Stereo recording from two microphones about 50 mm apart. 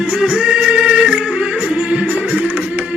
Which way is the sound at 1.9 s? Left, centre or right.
Right.